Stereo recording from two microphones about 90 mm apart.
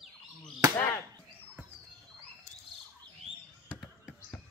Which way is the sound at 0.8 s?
25° left (ahead or behind).